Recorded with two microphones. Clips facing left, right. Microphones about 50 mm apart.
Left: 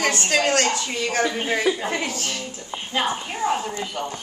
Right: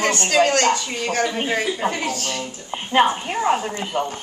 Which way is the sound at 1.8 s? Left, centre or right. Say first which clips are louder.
Right 3 dB; right.